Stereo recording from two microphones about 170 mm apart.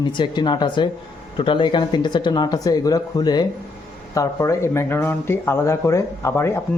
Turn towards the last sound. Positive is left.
turn(degrees=15)  # may be behind; listen again after turning